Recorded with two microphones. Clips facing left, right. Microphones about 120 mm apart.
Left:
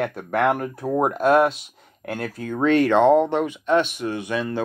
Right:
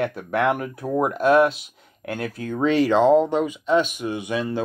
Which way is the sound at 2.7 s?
55° left (ahead or behind).